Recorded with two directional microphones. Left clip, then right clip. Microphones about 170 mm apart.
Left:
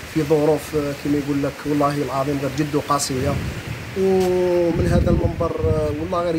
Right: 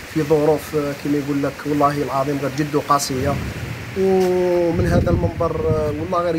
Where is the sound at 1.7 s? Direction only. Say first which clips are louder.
Right 3 dB; centre (ahead or behind).